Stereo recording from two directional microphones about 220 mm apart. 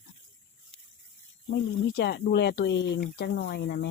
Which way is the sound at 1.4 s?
45° left (ahead or behind).